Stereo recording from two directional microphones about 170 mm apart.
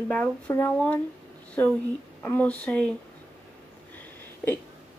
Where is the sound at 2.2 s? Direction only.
10° left (ahead or behind).